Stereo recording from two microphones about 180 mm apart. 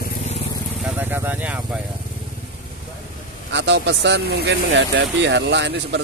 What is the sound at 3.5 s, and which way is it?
Speech, 75° right (ahead or behind).